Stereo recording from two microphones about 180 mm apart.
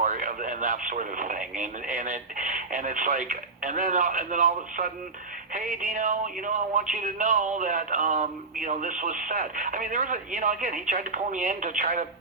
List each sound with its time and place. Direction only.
0.0 s speech: 45° right (ahead or behind)